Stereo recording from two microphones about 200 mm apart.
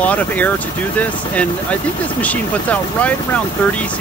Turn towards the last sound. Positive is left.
turn(degrees=5)  # may be behind; listen again after turning